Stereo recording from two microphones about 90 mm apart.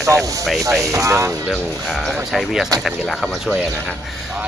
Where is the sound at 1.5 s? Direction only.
Centre (ahead or behind).